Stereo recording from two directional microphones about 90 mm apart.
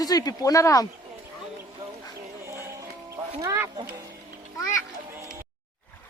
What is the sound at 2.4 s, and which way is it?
Music, 30° right (ahead or behind).